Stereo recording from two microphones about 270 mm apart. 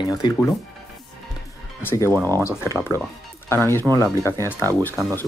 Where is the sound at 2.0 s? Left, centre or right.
Centre.